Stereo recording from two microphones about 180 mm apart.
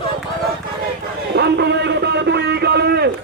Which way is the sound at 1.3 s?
70° right (ahead or behind).